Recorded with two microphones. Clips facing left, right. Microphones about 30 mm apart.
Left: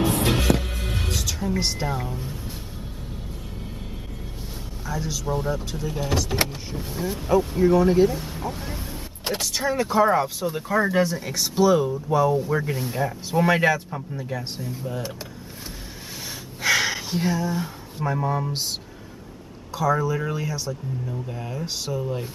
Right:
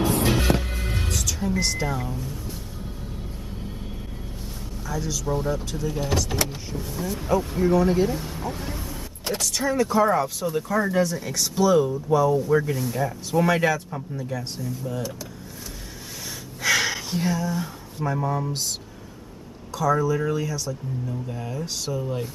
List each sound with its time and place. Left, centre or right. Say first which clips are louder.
0.6 s heart sounds: even; centre
1.0 s music: left 1 dB; centre
1.5 s speech: even; centre
4.8 s speech: even; centre
6.7 s speech: left 1 dB; centre
7.2 s speech: left 3 dB; centre
8.8 s speech: even; left
16.6 s speech: left 1 dB; centre
19.7 s speech: right 1 dB; centre